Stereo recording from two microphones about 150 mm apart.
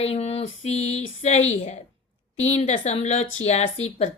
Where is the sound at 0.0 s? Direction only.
45° left (ahead or behind).